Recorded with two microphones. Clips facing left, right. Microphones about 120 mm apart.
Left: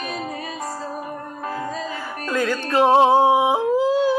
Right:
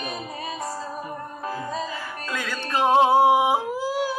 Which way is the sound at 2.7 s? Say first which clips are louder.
Left 3 dB; 30° left (ahead or behind).